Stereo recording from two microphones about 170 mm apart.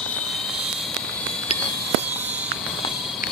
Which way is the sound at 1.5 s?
35° left (ahead or behind).